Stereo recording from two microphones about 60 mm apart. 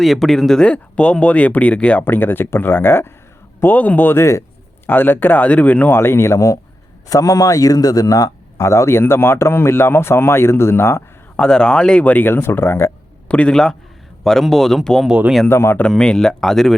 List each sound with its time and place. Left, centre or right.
0.0 s speech: centre
0.7 s speech: centre
2.0 s speech: left
4.9 s speech: left
5.9 s speech: left
7.1 s speech: left
8.6 s speech: left
11.3 s speech: centre
12.2 s speech: left
13.2 s a man's voice: left
14.3 s speech: centre
15.4 s speech: left
15.9 s speech: centre